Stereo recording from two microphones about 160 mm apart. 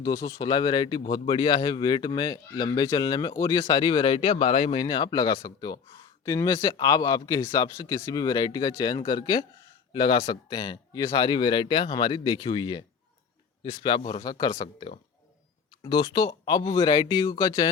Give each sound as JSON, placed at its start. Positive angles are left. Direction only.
{"t": 0.0, "sound": "speech", "side_deg": 20}